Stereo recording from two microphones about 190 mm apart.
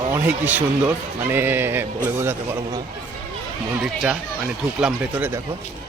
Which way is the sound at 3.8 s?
5° right (ahead or behind).